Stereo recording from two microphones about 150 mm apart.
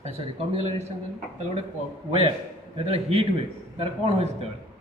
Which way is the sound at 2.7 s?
40° right (ahead or behind).